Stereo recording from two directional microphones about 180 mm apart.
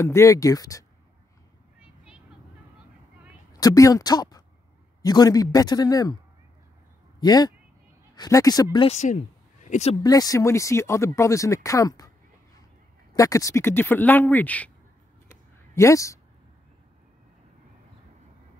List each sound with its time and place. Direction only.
0.0 s speech: 15° left (ahead or behind)
3.5 s speech: 20° left (ahead or behind)
7.2 s speech: 20° left (ahead or behind)
8.7 s speech: 35° left (ahead or behind)
10.0 s speech: 20° left (ahead or behind)
13.1 s speech: 20° left (ahead or behind)
15.2 s a sound: 15° left (ahead or behind)